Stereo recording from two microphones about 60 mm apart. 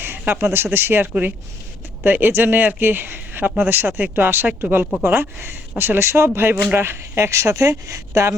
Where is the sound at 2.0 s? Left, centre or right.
Right.